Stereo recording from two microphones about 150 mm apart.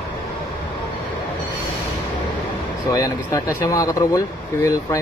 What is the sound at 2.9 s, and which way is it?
Speech, 25° left (ahead or behind).